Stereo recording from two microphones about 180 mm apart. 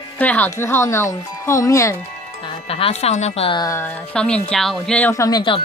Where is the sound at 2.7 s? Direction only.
35° left (ahead or behind); by 3.9 s 20° left (ahead or behind).